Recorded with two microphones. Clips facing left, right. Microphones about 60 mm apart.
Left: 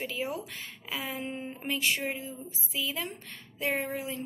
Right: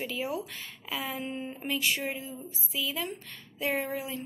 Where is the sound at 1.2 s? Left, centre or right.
Left.